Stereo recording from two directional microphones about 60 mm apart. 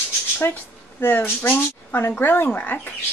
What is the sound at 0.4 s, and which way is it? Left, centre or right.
Speech, left.